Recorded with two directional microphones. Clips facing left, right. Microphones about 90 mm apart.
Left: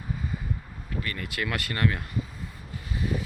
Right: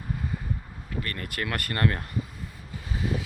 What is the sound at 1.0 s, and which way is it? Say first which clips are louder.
Speech: left 1 dB; 50° right (ahead or behind).